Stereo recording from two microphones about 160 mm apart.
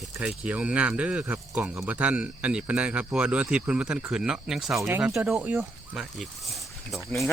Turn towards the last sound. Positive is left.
turn(degrees=0)  # may be behind; listen again after turning